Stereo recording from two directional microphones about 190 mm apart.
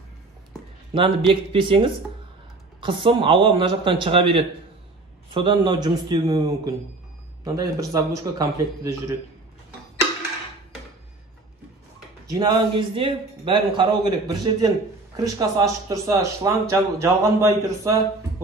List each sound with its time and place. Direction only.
0.9 s a man's voice: 25° right (ahead or behind)
12.3 s a man's voice: 25° right (ahead or behind)